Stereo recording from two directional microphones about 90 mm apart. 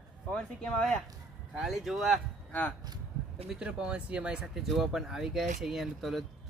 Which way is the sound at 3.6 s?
10° right (ahead or behind).